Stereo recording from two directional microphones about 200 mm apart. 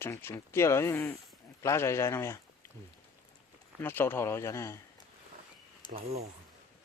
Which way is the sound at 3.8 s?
10° left (ahead or behind).